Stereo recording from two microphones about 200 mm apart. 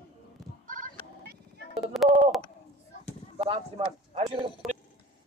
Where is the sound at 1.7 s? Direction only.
Centre (ahead or behind).